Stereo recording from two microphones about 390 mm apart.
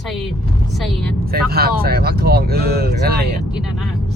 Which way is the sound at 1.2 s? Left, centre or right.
Right.